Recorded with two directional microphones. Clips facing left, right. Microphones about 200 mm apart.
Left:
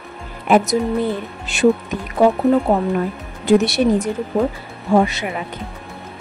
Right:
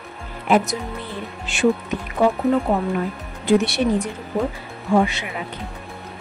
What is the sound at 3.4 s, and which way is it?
A woman's voice, 40° left (ahead or behind).